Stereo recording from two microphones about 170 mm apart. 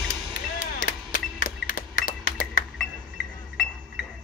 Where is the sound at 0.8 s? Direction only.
55° left (ahead or behind).